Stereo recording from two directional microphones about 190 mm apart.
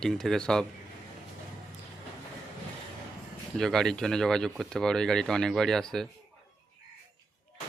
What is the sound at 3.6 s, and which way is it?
Speech, 5° left (ahead or behind).